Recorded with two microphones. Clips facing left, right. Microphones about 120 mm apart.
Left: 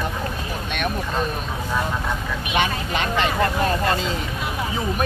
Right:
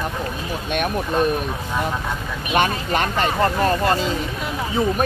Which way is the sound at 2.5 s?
45° right (ahead or behind).